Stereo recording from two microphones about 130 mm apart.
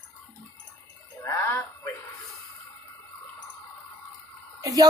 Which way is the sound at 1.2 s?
20° left (ahead or behind).